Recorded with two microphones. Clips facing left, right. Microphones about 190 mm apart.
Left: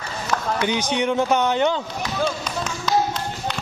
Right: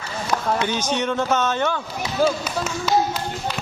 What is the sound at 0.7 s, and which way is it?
Speech, 15° left (ahead or behind).